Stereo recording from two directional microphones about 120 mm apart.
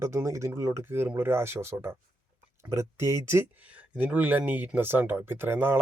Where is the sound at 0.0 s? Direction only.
25° right (ahead or behind).